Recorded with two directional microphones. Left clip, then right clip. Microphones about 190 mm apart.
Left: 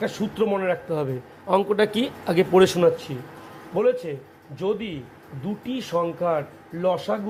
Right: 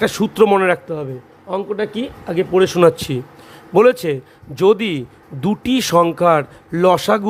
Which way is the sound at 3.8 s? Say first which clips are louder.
Right 10 dB; 60° right (ahead or behind).